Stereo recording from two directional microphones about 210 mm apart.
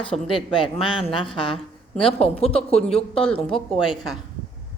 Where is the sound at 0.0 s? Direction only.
25° left (ahead or behind).